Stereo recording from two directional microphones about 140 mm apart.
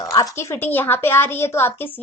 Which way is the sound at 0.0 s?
25° left (ahead or behind).